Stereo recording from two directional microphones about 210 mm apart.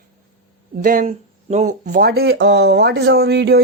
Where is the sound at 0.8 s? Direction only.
40° right (ahead or behind).